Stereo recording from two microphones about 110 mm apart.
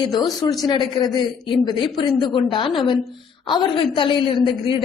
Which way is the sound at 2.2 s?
45° left (ahead or behind).